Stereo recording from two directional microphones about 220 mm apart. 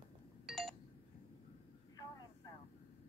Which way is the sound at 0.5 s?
Centre (ahead or behind).